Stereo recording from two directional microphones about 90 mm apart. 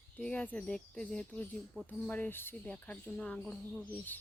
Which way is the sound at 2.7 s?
15° left (ahead or behind).